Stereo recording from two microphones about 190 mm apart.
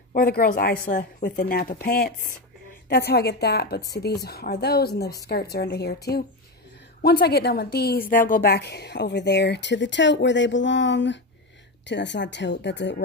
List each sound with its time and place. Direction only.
0.1 s a woman's voice: 50° left (ahead or behind); by 12.9 s 70° left (ahead or behind)